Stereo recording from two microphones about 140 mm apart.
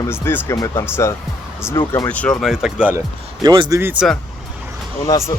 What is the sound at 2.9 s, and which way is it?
Speech, 25° right (ahead or behind).